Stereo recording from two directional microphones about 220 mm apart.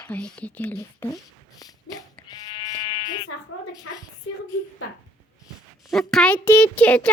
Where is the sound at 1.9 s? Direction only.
85° left.